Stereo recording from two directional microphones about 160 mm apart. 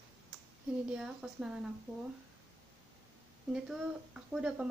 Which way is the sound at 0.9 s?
5° right (ahead or behind).